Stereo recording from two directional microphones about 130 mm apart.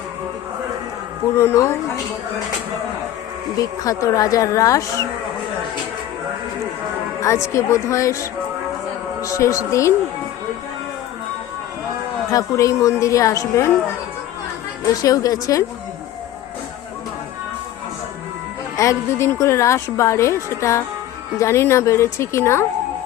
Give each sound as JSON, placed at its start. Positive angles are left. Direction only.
{"t": 1.4, "sound": "a woman's voice", "side_deg": 20}
{"t": 3.6, "sound": "a woman's voice", "side_deg": 25}
{"t": 7.2, "sound": "a woman's voice", "side_deg": 25}
{"t": 12.3, "sound": "a woman's voice", "side_deg": 25}
{"t": 14.8, "sound": "a woman's voice", "side_deg": 25}
{"t": 18.8, "sound": "a woman's voice", "side_deg": 20}